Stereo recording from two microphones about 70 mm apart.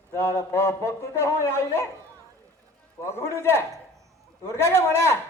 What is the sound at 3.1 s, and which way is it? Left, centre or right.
A man's voice, left.